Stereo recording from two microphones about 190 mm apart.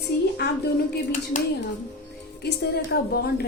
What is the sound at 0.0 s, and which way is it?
Speech, 55° left (ahead or behind).